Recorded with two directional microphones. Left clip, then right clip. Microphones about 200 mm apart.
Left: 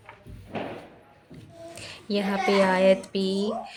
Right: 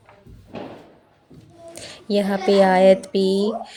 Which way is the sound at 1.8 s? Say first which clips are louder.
Right 7 dB; 15° right (ahead or behind).